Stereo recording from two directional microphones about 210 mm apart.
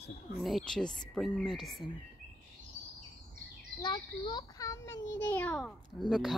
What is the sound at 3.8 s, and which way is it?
Speech, 20° left (ahead or behind).